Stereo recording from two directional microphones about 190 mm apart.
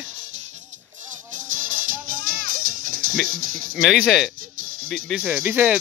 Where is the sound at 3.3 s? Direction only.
45° right (ahead or behind).